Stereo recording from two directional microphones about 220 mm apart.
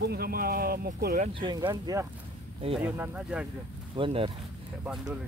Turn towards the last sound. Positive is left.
turn(degrees=-5)  # may be behind; listen again after turning